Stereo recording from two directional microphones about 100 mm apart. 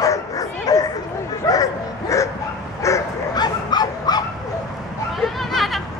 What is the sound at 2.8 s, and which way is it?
Bow-wow, 30° left (ahead or behind).